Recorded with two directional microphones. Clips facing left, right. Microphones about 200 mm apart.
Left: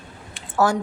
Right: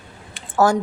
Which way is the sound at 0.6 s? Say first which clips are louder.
Right 3 dB; 45° right (ahead or behind).